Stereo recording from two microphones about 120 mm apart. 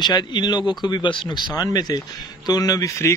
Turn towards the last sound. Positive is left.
turn(degrees=25)  # may be behind; listen again after turning